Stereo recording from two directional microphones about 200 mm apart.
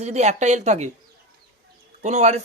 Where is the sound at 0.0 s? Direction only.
35° right (ahead or behind).